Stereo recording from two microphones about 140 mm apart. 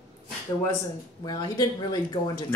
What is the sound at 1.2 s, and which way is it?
Speech, 30° left (ahead or behind).